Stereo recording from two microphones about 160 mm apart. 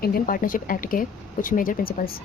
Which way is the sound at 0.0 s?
65° left (ahead or behind).